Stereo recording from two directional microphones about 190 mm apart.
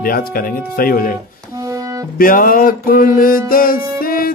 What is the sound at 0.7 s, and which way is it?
Speech, 50° left (ahead or behind).